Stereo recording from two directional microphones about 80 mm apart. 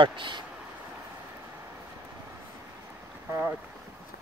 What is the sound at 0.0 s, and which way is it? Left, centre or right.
Speech, right.